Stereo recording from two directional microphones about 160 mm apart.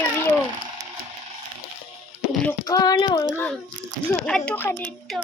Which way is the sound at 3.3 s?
10° left (ahead or behind).